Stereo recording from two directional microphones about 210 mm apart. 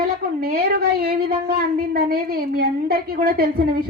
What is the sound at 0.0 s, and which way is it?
A woman's voice, 45° right (ahead or behind).